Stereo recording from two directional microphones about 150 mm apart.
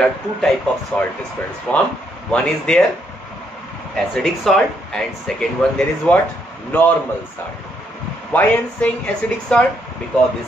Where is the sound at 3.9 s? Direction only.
Centre (ahead or behind).